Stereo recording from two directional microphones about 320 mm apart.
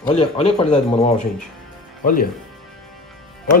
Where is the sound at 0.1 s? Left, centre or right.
Centre.